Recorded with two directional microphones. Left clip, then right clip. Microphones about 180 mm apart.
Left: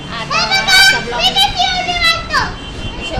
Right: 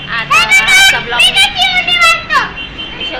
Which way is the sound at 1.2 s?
40° left (ahead or behind).